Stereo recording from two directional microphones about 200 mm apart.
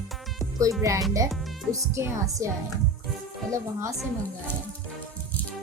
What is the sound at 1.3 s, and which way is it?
Music, centre (ahead or behind).